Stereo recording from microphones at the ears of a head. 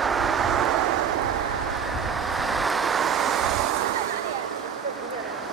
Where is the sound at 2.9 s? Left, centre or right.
Right.